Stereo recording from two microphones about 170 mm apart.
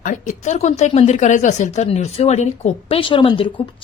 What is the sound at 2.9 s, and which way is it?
Speech, 30° left (ahead or behind).